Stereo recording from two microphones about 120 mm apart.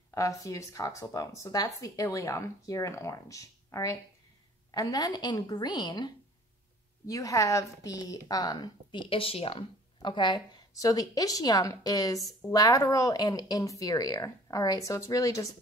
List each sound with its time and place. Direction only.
0.1 s a woman's voice: 25° left (ahead or behind)